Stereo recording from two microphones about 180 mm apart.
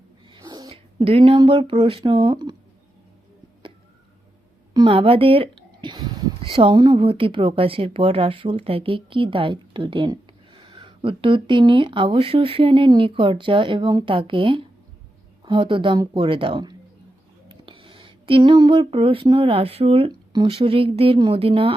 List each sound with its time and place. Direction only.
0.3 s cat: 25° right (ahead or behind)
0.9 s speech: 35° right (ahead or behind)
4.7 s speech: 25° right (ahead or behind)